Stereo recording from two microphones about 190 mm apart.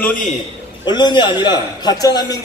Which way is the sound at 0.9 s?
25° left (ahead or behind).